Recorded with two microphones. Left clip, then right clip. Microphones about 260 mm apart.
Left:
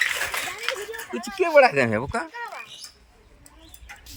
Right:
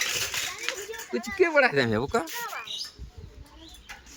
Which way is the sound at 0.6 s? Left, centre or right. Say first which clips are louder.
Left 4 dB; left.